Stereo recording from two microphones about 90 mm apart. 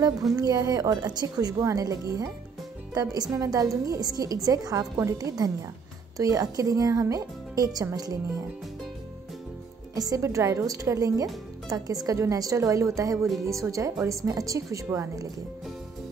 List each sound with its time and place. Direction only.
0.4 s speech: 45° right (ahead or behind)
9.9 s speech: 40° right (ahead or behind)